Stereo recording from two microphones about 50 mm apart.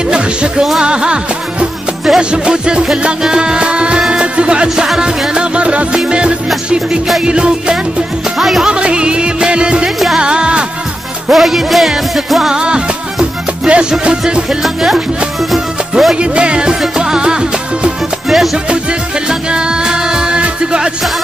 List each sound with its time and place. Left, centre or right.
0.1 s music: centre
8.4 s speech: centre
8.6 s music: centre
11.3 s music: centre
14.6 s speech: centre
16.2 s music: centre
18.3 s music: centre
18.7 s music: centre